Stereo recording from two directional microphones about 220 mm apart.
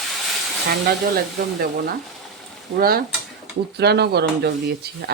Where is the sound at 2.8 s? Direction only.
45° right (ahead or behind).